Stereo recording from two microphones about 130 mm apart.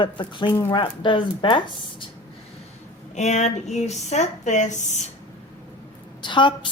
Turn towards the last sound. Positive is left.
turn(degrees=40)  # may be behind; listen again after turning